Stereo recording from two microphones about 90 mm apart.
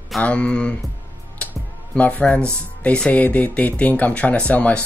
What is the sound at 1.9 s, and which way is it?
Speech, 15° left (ahead or behind).